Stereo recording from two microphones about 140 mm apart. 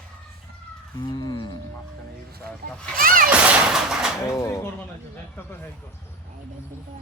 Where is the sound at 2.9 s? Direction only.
90° right.